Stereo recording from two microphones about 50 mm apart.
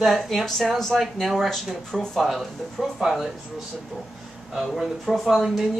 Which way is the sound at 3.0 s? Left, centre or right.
Centre.